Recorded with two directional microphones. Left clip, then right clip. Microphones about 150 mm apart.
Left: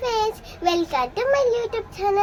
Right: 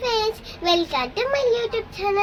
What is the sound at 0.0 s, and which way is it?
Child singing, 40° left (ahead or behind).